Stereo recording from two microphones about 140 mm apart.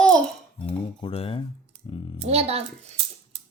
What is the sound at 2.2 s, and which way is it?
Speech, 50° right (ahead or behind).